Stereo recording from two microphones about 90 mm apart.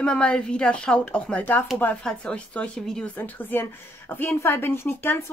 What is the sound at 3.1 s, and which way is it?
A woman's voice, 20° left (ahead or behind).